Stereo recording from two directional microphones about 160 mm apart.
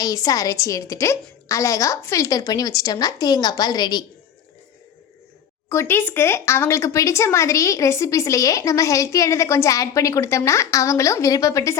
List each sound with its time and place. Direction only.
0.0 s speech: 20° left (ahead or behind)
5.6 s speech: 15° left (ahead or behind)